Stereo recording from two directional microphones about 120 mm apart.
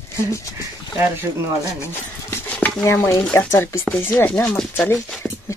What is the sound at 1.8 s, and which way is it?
Clip-clop, 20° left (ahead or behind).